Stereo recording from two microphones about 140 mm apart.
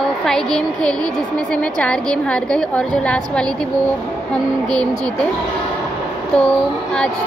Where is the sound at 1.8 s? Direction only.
5° left (ahead or behind).